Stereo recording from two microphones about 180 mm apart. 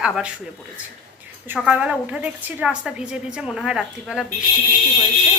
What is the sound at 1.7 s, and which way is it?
A woman's voice, 5° right (ahead or behind).